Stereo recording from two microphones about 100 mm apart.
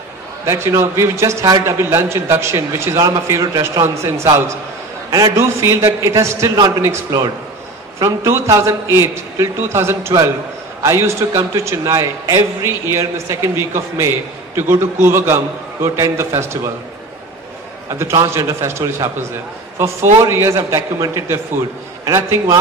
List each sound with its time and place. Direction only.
0.5 s a man's voice: 30° right (ahead or behind)
17.8 s a man's voice: 30° right (ahead or behind)